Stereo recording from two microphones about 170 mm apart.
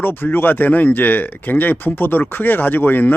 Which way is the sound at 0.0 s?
10° left (ahead or behind).